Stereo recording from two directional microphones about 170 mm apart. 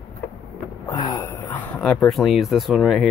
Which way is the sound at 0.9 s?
20° left (ahead or behind).